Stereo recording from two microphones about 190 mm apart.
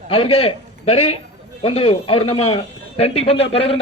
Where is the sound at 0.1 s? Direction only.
30° left (ahead or behind).